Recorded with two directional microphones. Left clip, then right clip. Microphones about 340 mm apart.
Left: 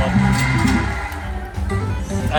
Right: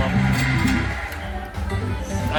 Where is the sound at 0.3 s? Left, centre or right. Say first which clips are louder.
Left 3 dB; centre.